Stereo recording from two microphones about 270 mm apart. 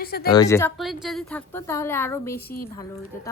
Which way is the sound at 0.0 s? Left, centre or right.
Left.